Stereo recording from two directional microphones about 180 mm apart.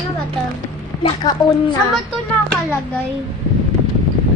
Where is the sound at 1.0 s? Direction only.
25° left (ahead or behind).